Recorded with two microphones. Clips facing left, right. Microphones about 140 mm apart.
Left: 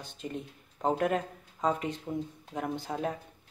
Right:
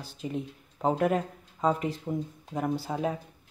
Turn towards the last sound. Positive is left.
turn(degrees=-5)  # may be behind; listen again after turning